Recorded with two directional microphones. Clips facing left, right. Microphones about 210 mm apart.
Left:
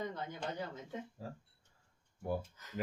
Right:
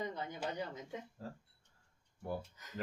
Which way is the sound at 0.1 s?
5° right (ahead or behind).